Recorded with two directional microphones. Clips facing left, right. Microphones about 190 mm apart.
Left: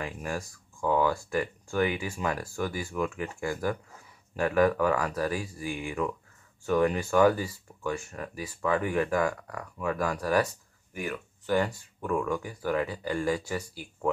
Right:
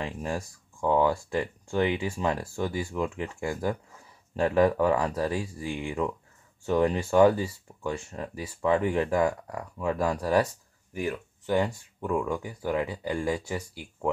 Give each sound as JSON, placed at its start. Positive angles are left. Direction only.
{"t": 0.0, "sound": "speech", "side_deg": -25}